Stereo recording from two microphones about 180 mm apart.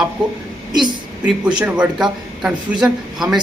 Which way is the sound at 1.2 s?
5° right (ahead or behind).